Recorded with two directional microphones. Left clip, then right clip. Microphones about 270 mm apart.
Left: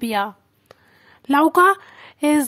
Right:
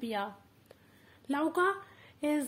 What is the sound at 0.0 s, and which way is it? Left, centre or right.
Speech, left.